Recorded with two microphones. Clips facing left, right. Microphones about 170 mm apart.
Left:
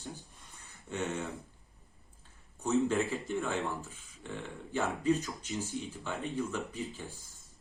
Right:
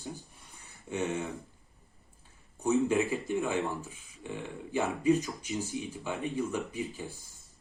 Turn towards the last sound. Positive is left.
turn(degrees=-15)  # may be behind; listen again after turning